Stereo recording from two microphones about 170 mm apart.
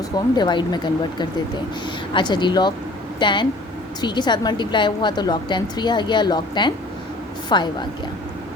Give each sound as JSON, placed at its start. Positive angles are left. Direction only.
{"t": 0.3, "sound": "a woman's voice", "side_deg": 25}